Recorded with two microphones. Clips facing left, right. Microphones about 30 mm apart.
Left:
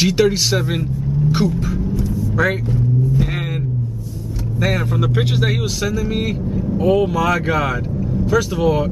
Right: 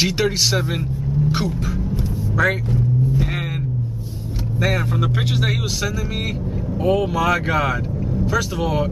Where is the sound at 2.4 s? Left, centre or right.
Centre.